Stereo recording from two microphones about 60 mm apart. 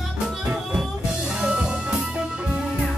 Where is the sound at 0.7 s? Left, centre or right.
Centre.